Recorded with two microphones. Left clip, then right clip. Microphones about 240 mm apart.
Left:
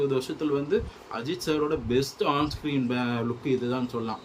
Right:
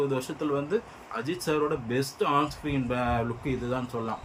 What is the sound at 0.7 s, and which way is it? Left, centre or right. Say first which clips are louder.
Speech: left 2 dB; centre.